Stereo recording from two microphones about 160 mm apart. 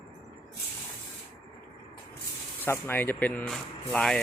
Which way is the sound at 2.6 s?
15° left (ahead or behind).